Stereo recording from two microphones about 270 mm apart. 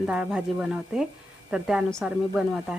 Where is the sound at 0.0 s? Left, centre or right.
Centre.